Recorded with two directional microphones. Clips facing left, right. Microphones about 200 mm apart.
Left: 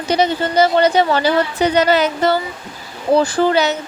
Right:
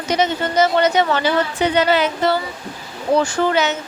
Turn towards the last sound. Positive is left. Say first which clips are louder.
# left 3 dB
turn(degrees=35)  # may be behind; listen again after turning